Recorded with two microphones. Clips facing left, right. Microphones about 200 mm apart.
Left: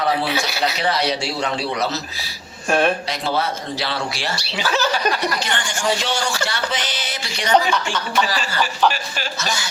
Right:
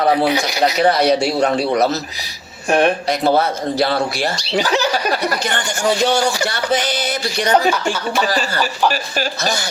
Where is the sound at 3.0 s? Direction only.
50° right (ahead or behind).